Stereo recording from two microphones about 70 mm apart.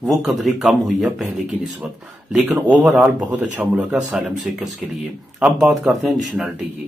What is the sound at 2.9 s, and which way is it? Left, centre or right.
Speech, right.